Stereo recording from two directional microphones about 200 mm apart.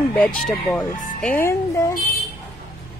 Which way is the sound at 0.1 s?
5° left (ahead or behind).